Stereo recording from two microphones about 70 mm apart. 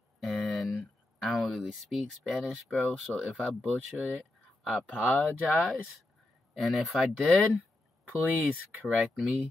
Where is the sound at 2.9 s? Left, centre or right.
Centre.